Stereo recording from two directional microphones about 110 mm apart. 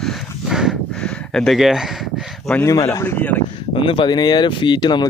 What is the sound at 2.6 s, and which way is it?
Speech, 30° left (ahead or behind).